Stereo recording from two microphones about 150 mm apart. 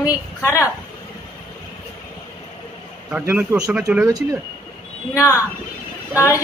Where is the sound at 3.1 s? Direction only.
10° right (ahead or behind).